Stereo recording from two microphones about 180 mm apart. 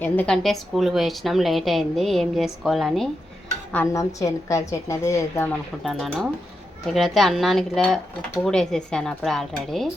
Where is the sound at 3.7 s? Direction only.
15° left (ahead or behind).